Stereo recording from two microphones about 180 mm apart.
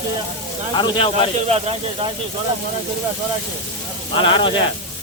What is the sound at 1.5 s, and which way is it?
Speech, 35° right (ahead or behind).